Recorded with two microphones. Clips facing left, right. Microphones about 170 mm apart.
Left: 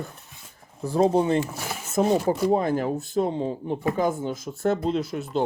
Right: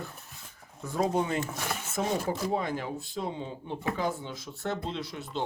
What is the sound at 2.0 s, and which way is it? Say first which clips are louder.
Speech: left 9 dB; 40° left (ahead or behind).